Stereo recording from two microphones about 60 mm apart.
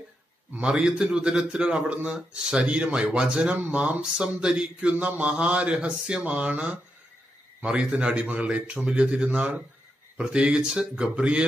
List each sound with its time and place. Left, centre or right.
0.6 s speech: centre
3.5 s speech: right